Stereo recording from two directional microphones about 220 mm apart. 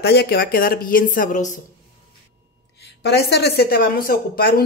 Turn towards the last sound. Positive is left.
turn(degrees=45)  # may be behind; listen again after turning